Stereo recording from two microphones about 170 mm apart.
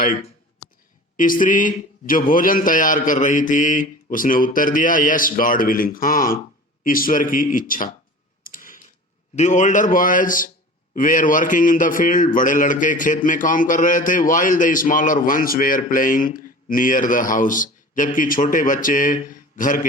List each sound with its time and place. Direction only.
0.0 s a sound: 55° left (ahead or behind)
1.1 s a man's voice: 50° left (ahead or behind)
8.4 s typewriter: 55° left (ahead or behind)
9.3 s a man's voice: 45° left (ahead or behind)